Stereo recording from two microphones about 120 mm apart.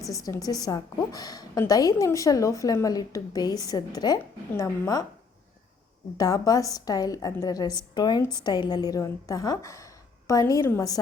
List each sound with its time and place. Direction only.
0.1 s a woman's voice: 30° left (ahead or behind)
6.1 s a woman's voice: 30° left (ahead or behind)